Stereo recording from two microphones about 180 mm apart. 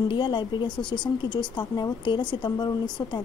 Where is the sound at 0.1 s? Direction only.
25° left (ahead or behind).